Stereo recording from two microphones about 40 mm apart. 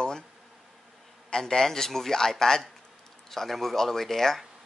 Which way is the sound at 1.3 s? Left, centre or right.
Centre.